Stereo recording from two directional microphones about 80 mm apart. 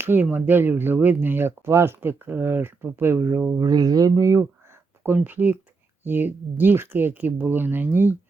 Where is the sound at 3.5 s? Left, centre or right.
Right.